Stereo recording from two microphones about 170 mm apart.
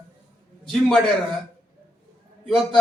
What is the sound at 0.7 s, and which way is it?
Speech, centre (ahead or behind).